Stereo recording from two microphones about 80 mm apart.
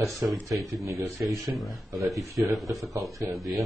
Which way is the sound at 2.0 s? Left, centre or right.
Right.